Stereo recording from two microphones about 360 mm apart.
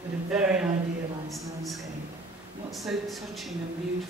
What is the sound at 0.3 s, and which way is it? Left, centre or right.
Speech, centre.